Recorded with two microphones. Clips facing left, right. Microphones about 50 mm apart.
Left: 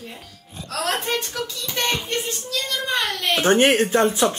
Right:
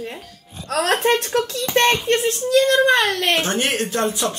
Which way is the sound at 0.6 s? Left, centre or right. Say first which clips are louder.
Right 7 dB; right.